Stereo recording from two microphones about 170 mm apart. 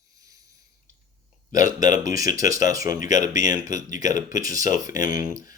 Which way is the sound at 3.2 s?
20° right (ahead or behind).